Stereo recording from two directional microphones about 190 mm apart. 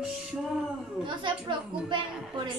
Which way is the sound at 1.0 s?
25° right (ahead or behind).